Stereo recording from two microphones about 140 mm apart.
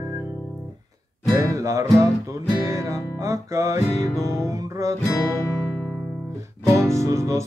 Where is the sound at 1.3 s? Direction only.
20° right (ahead or behind).